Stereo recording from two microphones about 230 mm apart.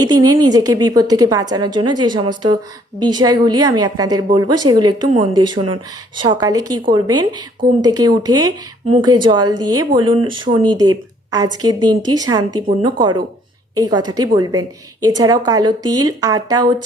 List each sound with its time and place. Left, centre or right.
0.0 s a woman's voice: centre